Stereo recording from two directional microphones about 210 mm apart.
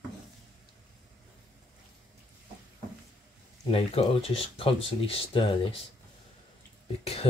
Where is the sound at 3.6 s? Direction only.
25° left (ahead or behind).